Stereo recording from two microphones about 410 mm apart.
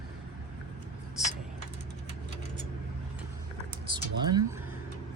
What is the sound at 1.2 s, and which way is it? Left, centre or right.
Vehicle, centre.